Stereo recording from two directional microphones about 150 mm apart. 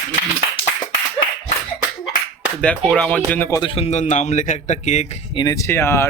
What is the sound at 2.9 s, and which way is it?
Speech, 10° left (ahead or behind).